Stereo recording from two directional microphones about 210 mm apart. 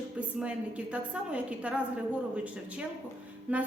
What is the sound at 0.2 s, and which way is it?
A woman's voice, 5° right (ahead or behind).